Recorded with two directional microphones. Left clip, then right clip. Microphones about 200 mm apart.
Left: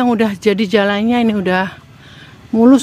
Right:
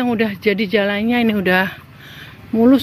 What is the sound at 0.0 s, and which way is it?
Speech, 20° left (ahead or behind).